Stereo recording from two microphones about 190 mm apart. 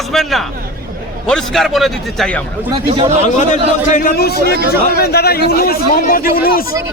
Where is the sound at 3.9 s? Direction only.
45° left (ahead or behind).